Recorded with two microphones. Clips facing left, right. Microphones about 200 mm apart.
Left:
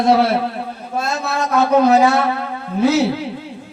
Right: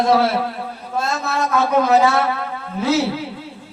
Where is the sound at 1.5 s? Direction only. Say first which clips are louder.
Left 4 dB; 35° left (ahead or behind).